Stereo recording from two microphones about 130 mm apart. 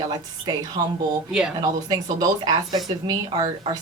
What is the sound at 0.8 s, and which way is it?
Speech, 30° right (ahead or behind).